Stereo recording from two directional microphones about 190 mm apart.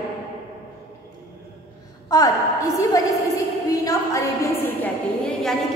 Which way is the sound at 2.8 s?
20° left (ahead or behind).